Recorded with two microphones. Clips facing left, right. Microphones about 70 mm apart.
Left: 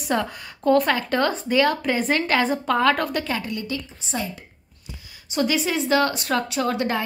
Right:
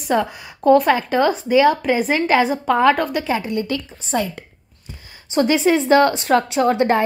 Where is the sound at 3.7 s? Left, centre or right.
Right.